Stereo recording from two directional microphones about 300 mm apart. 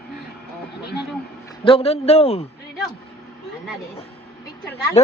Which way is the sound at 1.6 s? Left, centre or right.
Centre.